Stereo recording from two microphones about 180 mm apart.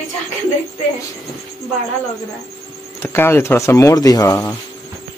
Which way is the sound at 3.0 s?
15° left (ahead or behind).